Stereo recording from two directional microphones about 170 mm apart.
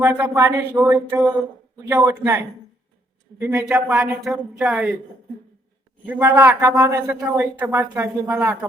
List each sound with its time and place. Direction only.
0.0 s a man's voice: 10° right (ahead or behind)
6.1 s a man's voice: 10° right (ahead or behind)